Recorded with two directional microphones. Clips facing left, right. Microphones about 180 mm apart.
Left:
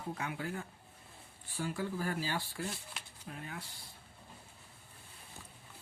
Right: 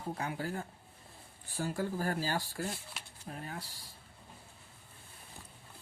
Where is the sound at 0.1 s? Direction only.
35° right (ahead or behind).